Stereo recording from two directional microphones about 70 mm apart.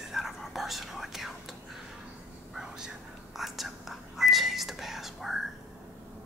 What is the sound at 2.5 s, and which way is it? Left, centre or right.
Whispering, centre.